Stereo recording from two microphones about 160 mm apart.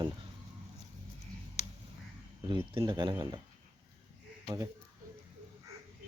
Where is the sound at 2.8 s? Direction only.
30° right (ahead or behind).